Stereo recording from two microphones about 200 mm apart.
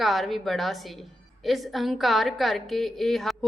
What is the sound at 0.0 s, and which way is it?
A woman's voice, centre (ahead or behind).